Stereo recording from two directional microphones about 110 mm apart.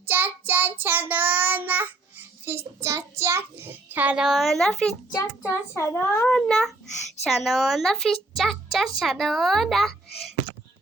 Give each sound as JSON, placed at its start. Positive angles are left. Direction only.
{"t": 0.0, "sound": "a child's voice", "side_deg": -15}
{"t": 5.1, "sound": "a child's voice", "side_deg": 25}
{"t": 6.3, "sound": "speech", "side_deg": 5}